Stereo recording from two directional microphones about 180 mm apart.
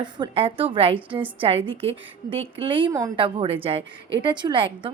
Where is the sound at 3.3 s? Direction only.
30° right (ahead or behind).